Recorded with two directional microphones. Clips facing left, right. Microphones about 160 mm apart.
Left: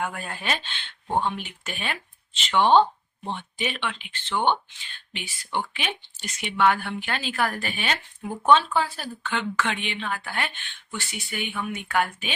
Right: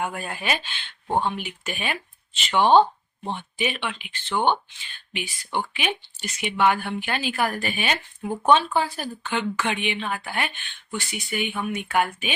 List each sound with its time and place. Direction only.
0.0 s speech: 10° right (ahead or behind)